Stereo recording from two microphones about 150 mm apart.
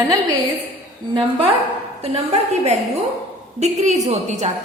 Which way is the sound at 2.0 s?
45° right (ahead or behind).